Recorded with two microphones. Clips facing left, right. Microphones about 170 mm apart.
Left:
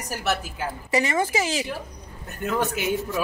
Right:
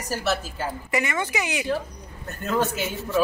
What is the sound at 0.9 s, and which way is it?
Speech, 30° left (ahead or behind).